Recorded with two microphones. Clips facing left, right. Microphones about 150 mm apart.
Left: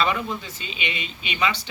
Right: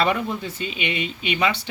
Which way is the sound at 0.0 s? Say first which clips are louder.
Right 2 dB; 60° right (ahead or behind).